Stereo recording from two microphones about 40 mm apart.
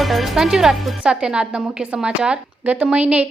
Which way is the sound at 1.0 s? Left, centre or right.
Right.